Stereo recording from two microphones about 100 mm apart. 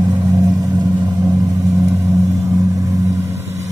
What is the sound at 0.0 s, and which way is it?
Vehicle, 35° right (ahead or behind).